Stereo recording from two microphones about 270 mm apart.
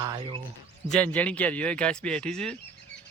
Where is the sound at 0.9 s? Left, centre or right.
Centre.